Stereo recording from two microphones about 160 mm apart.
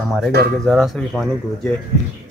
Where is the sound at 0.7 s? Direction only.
5° left (ahead or behind).